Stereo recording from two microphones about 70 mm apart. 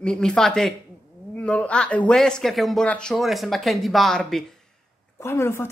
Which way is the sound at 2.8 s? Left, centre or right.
Centre.